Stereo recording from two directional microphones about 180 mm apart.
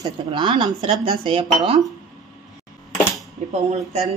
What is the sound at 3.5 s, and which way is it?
Speech, 35° right (ahead or behind).